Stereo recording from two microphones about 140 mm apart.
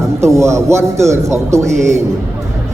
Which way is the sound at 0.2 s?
20° right (ahead or behind).